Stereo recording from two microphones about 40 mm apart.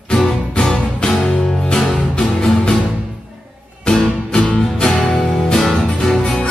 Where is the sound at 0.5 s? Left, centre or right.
Centre.